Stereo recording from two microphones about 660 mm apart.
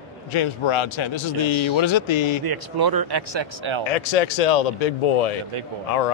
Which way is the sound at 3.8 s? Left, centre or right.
Left.